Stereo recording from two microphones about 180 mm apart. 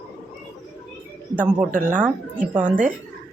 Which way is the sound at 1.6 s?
45° right (ahead or behind).